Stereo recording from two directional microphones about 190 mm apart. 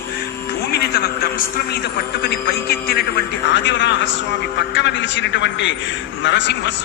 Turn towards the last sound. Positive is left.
turn(degrees=70)  # may be behind; listen again after turning